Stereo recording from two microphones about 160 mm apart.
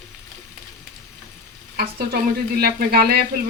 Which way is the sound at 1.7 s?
75° right (ahead or behind).